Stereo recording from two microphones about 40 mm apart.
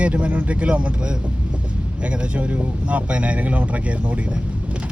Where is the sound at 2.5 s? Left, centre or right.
Right.